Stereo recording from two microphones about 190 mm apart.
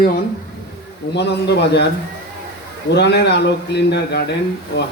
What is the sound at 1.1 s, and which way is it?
Speech, 65° left (ahead or behind).